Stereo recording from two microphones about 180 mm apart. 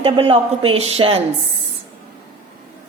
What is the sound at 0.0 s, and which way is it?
A woman's voice, 30° right (ahead or behind).